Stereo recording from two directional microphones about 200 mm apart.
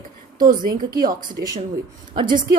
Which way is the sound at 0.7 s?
20° right (ahead or behind).